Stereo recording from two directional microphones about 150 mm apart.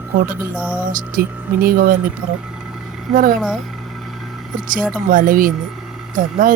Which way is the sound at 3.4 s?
Centre (ahead or behind).